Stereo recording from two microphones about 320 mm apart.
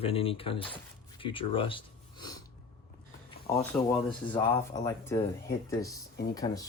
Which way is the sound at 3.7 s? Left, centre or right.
Centre.